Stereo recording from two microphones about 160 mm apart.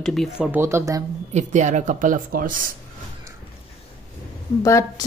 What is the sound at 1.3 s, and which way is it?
Speech, 50° right (ahead or behind).